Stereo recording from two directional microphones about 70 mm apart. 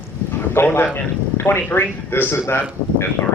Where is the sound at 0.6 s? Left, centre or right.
Left.